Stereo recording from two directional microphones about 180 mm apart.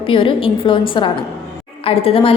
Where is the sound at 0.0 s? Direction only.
30° left (ahead or behind).